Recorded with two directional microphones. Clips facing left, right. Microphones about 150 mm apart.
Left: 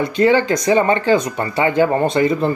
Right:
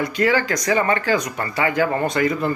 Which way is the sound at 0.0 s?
25° left (ahead or behind).